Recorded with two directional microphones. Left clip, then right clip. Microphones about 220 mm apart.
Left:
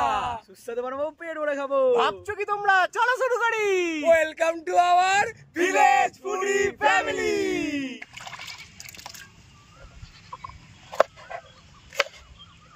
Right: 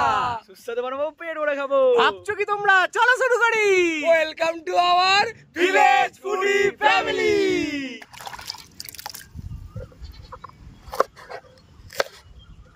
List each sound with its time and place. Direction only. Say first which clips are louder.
0.0 s a sound: right 4 dB; 15° right (ahead or behind)
0.7 s speech: right 3 dB; 15° left (ahead or behind)
2.2 s speech: right 3 dB; 10° right (ahead or behind)
4.1 s speech: left 2 dB; centre (ahead or behind)
5.6 s male singing: right 2 dB; 10° right (ahead or behind)